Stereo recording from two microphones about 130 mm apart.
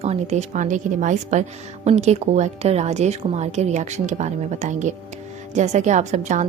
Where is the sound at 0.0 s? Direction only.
55° right (ahead or behind).